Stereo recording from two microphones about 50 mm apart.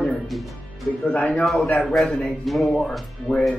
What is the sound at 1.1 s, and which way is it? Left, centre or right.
Speech, left.